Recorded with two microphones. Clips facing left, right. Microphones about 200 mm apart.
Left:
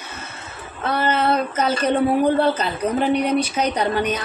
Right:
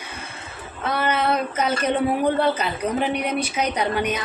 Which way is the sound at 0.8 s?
10° right (ahead or behind).